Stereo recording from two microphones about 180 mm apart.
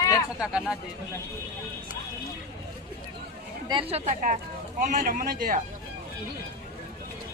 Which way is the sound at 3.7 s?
30° right (ahead or behind).